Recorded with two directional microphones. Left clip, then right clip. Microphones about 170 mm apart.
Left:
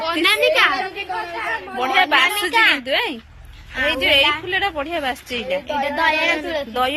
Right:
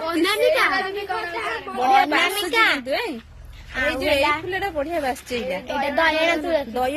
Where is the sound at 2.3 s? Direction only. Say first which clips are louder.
Left 3 dB; 90° right.